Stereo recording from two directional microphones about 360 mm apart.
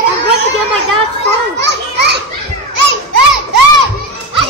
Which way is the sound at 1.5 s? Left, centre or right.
Right.